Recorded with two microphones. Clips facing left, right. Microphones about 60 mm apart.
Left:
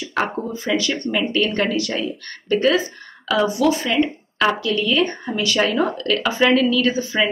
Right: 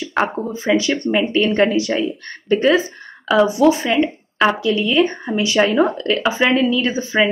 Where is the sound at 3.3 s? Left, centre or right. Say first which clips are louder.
Right 4 dB; right.